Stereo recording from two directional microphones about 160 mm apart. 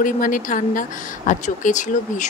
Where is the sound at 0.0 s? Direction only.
60° left (ahead or behind).